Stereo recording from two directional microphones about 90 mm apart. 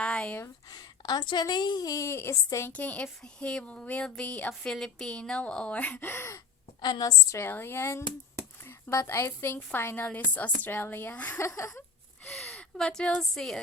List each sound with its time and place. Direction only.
0.0 s a sound: 10° left (ahead or behind)
0.7 s a woman's voice: 45° left (ahead or behind)
2.6 s speech: 15° left (ahead or behind)
6.8 s a woman's voice: 50° left (ahead or behind)
7.3 s a woman's voice: 25° left (ahead or behind)
11.3 s a sound: 35° left (ahead or behind)
12.2 s speech: 15° left (ahead or behind)